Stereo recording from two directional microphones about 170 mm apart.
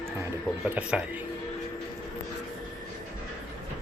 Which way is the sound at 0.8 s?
5° right (ahead or behind).